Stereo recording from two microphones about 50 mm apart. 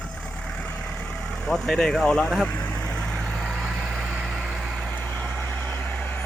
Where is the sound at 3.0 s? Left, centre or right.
Centre.